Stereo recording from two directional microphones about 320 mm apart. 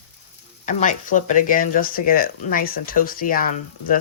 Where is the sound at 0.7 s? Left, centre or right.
Left.